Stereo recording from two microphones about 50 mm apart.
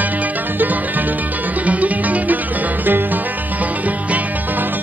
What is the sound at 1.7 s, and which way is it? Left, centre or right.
Music, right.